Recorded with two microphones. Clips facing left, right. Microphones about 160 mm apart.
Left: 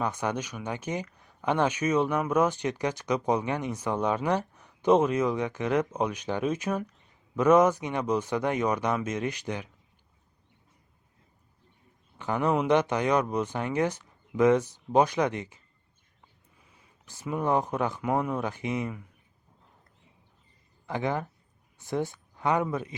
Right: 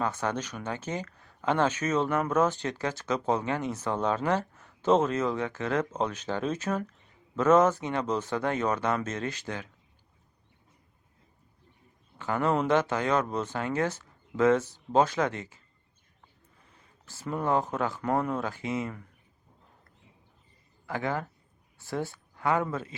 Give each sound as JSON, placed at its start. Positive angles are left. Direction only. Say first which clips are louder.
{"t": 0.0, "sound": "speech", "louder": "even", "side_deg": 15}
{"t": 12.1, "sound": "speech", "louder": "left 1 dB", "side_deg": 15}
{"t": 20.8, "sound": "speech", "louder": "left 2 dB", "side_deg": 20}